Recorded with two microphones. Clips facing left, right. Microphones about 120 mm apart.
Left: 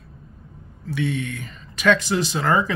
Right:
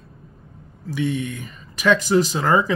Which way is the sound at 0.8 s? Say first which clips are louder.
Right 1 dB; 15° right (ahead or behind).